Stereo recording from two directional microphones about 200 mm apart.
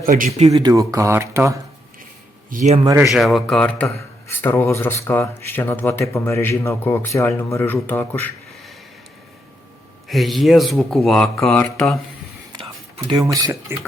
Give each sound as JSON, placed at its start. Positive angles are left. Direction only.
{"t": 0.0, "sound": "speech", "side_deg": -40}
{"t": 0.5, "sound": "speech", "side_deg": -15}
{"t": 2.5, "sound": "speech", "side_deg": -35}
{"t": 2.8, "sound": "speech", "side_deg": -15}
{"t": 3.1, "sound": "a man's voice", "side_deg": 0}
{"t": 10.1, "sound": "speech", "side_deg": 0}
{"t": 13.1, "sound": "speech", "side_deg": -20}